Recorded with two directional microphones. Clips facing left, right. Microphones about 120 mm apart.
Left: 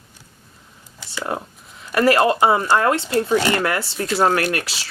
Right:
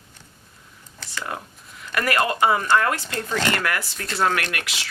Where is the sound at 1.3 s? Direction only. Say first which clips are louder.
Left 6 dB; 30° left (ahead or behind).